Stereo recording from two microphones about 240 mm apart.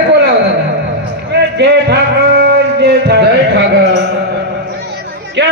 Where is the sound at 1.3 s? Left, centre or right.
Right.